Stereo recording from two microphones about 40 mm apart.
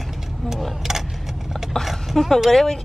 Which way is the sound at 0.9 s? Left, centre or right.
Centre.